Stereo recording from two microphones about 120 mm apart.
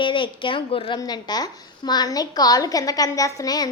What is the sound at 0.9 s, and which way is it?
A woman's voice, 35° left (ahead or behind).